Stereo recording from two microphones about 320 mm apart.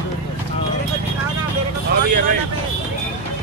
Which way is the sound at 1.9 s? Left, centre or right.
Right.